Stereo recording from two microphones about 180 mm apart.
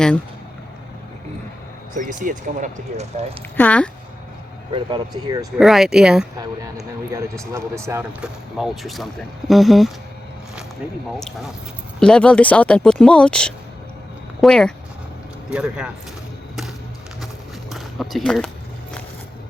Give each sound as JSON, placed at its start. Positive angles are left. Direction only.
{"t": 2.0, "sound": "speech", "side_deg": -45}
{"t": 3.6, "sound": "speech", "side_deg": 5}
{"t": 4.7, "sound": "speech", "side_deg": -25}
{"t": 5.5, "sound": "speech", "side_deg": 0}
{"t": 7.5, "sound": "speech", "side_deg": -15}
{"t": 8.2, "sound": "speech", "side_deg": 0}
{"t": 11.9, "sound": "speech", "side_deg": 5}
{"t": 17.7, "sound": "speech", "side_deg": 0}